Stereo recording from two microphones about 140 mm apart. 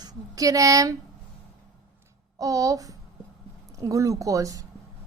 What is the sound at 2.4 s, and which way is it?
A woman's voice, 25° right (ahead or behind).